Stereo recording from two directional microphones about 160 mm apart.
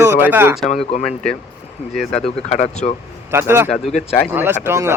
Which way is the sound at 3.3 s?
15° right (ahead or behind).